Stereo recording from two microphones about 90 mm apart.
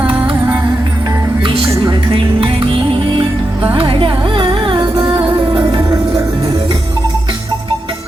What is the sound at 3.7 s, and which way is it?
Music, 75° right (ahead or behind).